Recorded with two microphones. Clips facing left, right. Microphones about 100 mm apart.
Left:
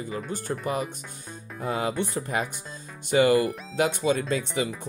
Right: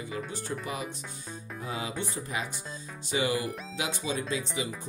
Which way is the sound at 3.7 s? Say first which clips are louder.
Left 11 dB; 55° left (ahead or behind).